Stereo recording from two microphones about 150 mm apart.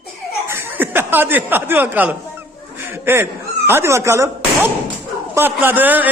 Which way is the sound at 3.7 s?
15° right (ahead or behind).